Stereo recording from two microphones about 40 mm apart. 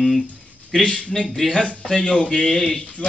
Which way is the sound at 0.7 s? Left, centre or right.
Left.